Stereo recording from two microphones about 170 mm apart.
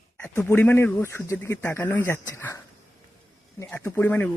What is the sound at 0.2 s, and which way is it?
Speech, 15° left (ahead or behind).